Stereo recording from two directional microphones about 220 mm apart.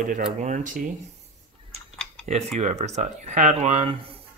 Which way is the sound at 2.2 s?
30° right (ahead or behind).